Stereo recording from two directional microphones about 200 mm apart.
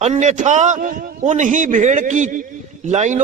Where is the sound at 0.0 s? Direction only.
35° right (ahead or behind).